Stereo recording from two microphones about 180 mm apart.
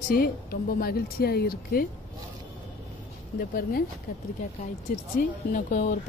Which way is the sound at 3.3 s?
55° left (ahead or behind).